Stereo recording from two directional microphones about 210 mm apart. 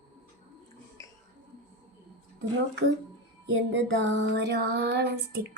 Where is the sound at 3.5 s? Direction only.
55° right (ahead or behind).